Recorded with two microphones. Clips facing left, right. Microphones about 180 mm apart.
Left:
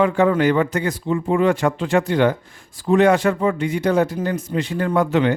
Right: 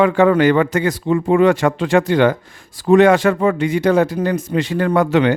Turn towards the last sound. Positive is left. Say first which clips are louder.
# right 3 dB
turn(degrees=-90)